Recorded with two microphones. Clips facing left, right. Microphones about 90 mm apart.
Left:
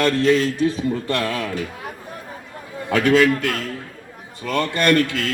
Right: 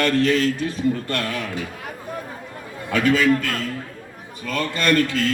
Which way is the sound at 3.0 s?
75° left (ahead or behind).